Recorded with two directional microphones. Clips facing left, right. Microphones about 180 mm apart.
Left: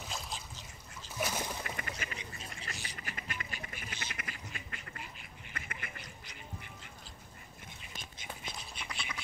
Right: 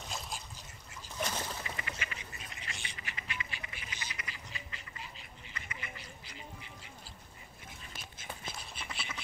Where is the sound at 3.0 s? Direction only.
45° left (ahead or behind).